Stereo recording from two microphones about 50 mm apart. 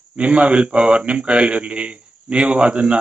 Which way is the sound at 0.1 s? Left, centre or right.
Right.